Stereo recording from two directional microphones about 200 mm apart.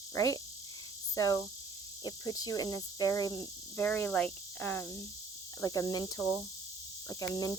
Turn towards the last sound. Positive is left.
turn(degrees=15)  # may be behind; listen again after turning